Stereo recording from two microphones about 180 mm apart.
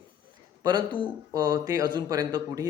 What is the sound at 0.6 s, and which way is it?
Speech, 25° right (ahead or behind).